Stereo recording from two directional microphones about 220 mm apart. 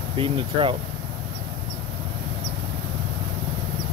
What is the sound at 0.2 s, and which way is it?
Speech, 25° right (ahead or behind).